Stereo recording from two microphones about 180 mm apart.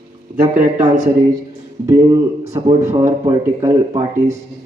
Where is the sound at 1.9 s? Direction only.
15° right (ahead or behind).